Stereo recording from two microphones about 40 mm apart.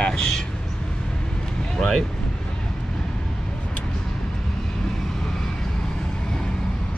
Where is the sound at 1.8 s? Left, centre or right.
Centre.